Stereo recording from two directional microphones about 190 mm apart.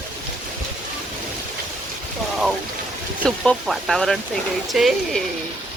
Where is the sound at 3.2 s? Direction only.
5° left (ahead or behind).